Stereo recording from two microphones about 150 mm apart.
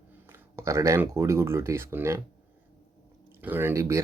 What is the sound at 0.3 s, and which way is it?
Speech, 20° right (ahead or behind).